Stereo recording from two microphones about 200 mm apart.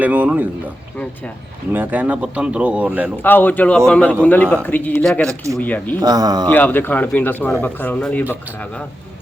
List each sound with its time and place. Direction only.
0.0 s speech: 5° right (ahead or behind)
1.7 s speech: 10° right (ahead or behind)
3.2 s a man's voice: 10° left (ahead or behind)
6.0 s speech: 20° right (ahead or behind)
6.5 s a man's voice: 10° left (ahead or behind)